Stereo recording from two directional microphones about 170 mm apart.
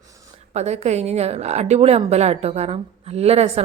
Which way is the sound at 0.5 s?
40° right (ahead or behind).